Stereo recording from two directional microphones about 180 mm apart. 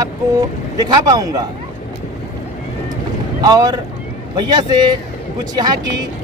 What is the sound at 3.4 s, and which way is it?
Speech, 20° right (ahead or behind).